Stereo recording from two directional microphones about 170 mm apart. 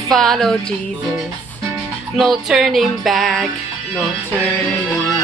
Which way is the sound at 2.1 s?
Centre (ahead or behind).